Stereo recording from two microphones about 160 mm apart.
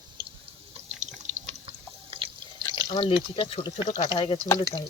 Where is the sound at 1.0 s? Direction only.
45° right (ahead or behind).